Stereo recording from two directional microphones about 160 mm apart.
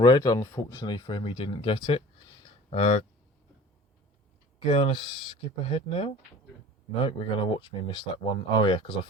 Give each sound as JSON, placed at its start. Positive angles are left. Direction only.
{"t": 0.0, "sound": "speech", "side_deg": 25}
{"t": 2.6, "sound": "speech", "side_deg": 45}
{"t": 4.7, "sound": "speech", "side_deg": 35}